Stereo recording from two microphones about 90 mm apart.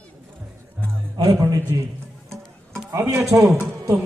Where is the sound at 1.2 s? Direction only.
40° right (ahead or behind).